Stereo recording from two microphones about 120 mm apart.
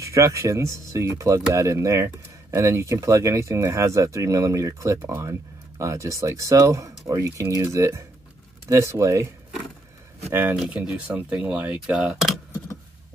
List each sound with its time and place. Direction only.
0.0 s speech: 25° right (ahead or behind)
10.5 s speech: 5° right (ahead or behind)